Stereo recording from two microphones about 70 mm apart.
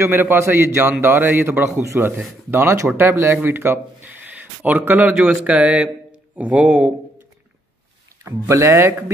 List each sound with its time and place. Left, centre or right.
0.0 s a man's voice: right; by 6.9 s centre
8.5 s speech: right